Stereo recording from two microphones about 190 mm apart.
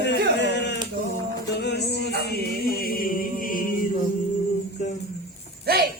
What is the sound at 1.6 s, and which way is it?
Music, 60° left (ahead or behind).